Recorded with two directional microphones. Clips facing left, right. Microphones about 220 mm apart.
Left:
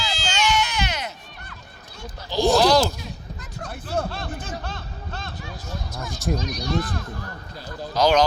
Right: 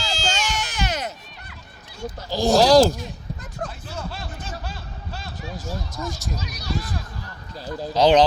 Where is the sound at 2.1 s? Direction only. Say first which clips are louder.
Right 1 dB; 40° right (ahead or behind).